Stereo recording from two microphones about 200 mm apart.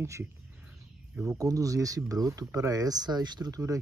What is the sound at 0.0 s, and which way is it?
Speech, 15° right (ahead or behind).